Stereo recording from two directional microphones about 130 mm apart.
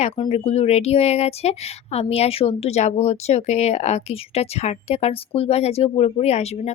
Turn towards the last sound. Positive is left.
turn(degrees=55)  # may be behind; listen again after turning